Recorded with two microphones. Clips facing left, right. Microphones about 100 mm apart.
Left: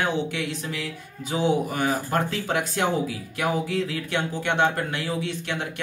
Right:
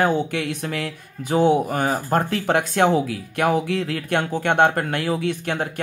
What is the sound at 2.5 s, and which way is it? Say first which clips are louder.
Speech: right 8 dB; 60° right (ahead or behind).